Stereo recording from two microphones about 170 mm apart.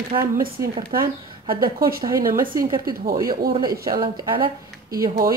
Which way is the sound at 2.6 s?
20° right (ahead or behind).